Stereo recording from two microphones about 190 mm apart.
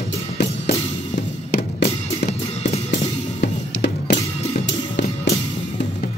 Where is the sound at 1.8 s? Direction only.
35° left (ahead or behind).